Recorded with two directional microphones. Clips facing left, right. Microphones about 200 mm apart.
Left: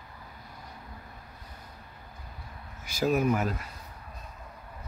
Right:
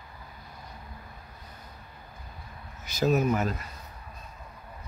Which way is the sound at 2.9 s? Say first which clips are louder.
Right 1 dB; 10° left (ahead or behind).